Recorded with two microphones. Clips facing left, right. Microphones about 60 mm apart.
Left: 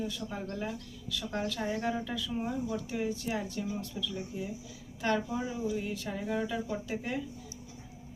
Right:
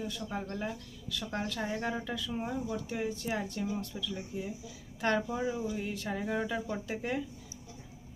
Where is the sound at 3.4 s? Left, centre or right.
Right.